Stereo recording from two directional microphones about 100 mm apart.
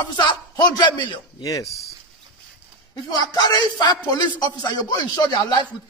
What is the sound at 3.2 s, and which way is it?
A man's voice, 40° left (ahead or behind).